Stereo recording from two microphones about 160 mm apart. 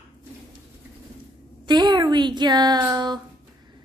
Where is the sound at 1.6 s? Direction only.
25° right (ahead or behind).